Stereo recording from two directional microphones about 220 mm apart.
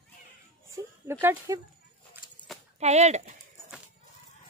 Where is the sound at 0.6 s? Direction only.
15° right (ahead or behind).